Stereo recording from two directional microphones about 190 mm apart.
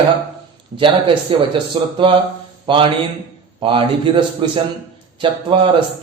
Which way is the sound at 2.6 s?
25° right (ahead or behind).